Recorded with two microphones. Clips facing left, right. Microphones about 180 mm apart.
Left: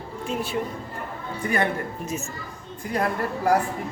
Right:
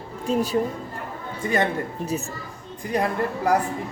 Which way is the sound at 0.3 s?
35° right (ahead or behind).